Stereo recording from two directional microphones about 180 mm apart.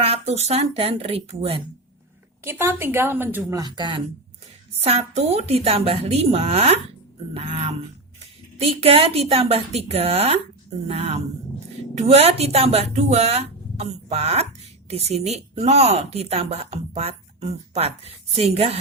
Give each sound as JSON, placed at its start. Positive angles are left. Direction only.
{"t": 0.0, "sound": "speech", "side_deg": -35}
{"t": 2.4, "sound": "a woman's voice", "side_deg": -15}
{"t": 3.6, "sound": "speech", "side_deg": -25}
{"t": 4.8, "sound": "speech", "side_deg": -35}